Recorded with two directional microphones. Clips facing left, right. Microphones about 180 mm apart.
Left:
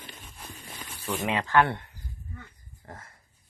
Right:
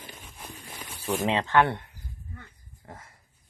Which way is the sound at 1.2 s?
20° right (ahead or behind).